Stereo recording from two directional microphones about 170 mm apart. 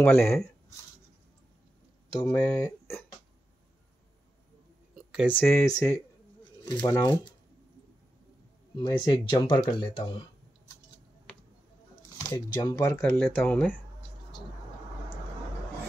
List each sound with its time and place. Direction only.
0.0 s speech: 10° left (ahead or behind)
2.1 s speech: 20° left (ahead or behind)
5.2 s speech: 10° left (ahead or behind)
8.7 s speech: 25° left (ahead or behind)
12.2 s speech: 20° left (ahead or behind)